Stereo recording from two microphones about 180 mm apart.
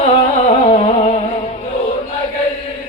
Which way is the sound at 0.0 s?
35° left (ahead or behind).